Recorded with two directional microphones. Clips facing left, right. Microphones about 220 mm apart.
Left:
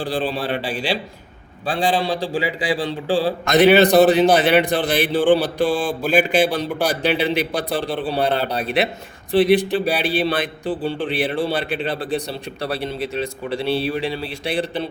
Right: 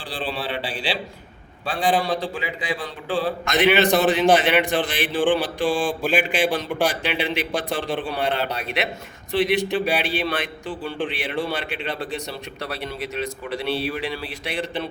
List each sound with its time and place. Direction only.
0.0 s a man's voice: 45° left (ahead or behind)
1.6 s a man's voice: 30° left (ahead or behind)